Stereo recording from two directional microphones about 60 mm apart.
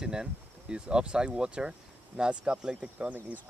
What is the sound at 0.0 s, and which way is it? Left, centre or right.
Speech, centre.